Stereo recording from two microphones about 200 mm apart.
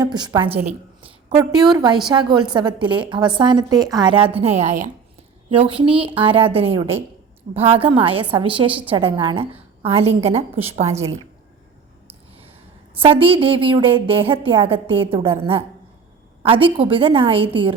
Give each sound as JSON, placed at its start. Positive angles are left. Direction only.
{"t": 0.0, "sound": "a woman's voice", "side_deg": -20}
{"t": 0.5, "sound": "a sound", "side_deg": -10}
{"t": 1.4, "sound": "a woman's voice", "side_deg": -20}
{"t": 5.5, "sound": "a woman's voice", "side_deg": -25}
{"t": 10.9, "sound": "a woman's voice", "side_deg": -15}
{"t": 13.0, "sound": "a woman's voice", "side_deg": -25}